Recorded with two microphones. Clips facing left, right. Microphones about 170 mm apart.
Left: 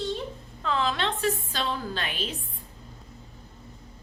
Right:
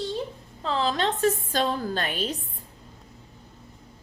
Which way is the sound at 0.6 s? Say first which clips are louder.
Right 2 dB; 35° right (ahead or behind).